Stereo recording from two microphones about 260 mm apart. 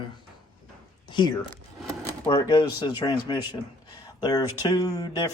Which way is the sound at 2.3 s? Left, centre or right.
Centre.